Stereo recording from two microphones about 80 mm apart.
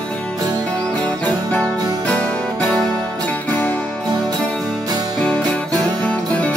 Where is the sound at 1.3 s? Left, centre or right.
Left.